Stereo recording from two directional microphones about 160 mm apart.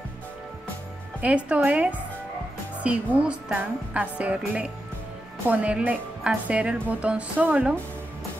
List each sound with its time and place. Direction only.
1.2 s a woman's voice: 10° right (ahead or behind)